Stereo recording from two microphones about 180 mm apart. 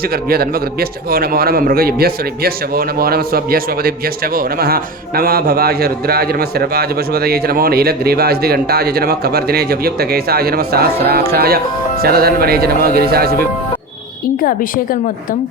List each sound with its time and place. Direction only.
0.0 s speech: 60° right (ahead or behind)
14.4 s a woman's voice: 50° left (ahead or behind)